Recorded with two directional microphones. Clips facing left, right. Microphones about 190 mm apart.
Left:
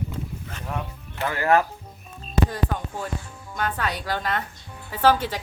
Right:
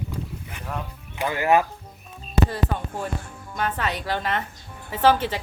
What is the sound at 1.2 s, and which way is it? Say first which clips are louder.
A woman's voice: right 1 dB; 15° right (ahead or behind).